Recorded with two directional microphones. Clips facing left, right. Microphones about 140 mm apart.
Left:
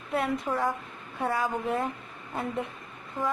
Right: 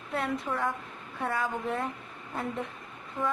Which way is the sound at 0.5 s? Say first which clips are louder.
Left 3 dB; 30° left (ahead or behind).